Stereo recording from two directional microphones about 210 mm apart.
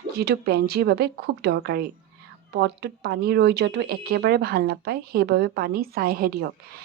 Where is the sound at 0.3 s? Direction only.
50° right (ahead or behind).